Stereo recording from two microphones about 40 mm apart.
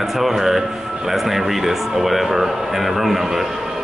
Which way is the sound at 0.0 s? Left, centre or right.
Centre.